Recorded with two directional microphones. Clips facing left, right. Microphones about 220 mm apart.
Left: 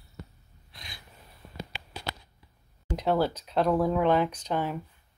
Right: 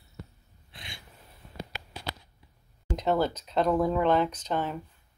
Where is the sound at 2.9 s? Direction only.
5° left (ahead or behind).